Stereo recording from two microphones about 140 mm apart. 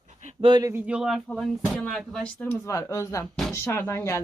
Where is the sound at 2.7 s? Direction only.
20° left (ahead or behind).